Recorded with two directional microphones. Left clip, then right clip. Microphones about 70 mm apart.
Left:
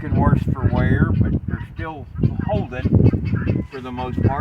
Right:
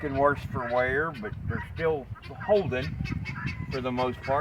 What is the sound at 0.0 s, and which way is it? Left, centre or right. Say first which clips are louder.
Speech: left 2 dB; centre.